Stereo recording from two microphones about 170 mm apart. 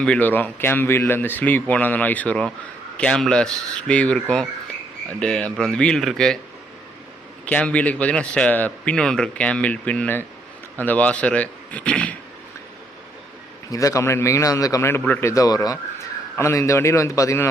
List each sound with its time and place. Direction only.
0.0 s speech: 10° left (ahead or behind)
7.4 s speech: 5° left (ahead or behind)
13.7 s speech: 20° left (ahead or behind)